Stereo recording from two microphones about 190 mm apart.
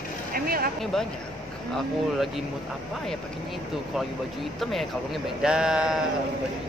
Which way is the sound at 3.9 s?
Centre (ahead or behind).